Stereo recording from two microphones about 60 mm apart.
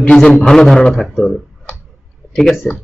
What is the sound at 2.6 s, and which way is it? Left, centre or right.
Speech, centre.